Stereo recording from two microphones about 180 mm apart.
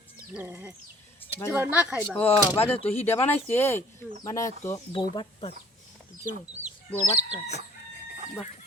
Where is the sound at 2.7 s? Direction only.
35° left (ahead or behind).